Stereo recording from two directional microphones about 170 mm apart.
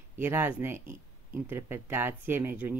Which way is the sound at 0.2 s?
15° right (ahead or behind).